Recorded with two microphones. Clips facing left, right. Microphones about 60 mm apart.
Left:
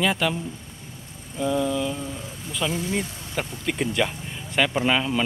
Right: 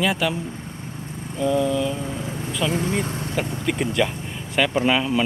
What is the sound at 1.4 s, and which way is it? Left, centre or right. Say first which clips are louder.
Speech: right 3 dB; centre.